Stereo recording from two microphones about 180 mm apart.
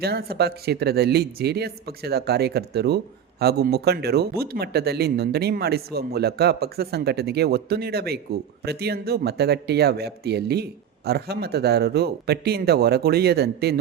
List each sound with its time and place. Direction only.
0.0 s speech: 60° right (ahead or behind)